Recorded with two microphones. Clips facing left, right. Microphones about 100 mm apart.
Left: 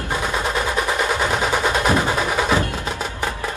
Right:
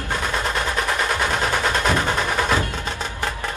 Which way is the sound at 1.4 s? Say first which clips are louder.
Left 2 dB; 5° left (ahead or behind).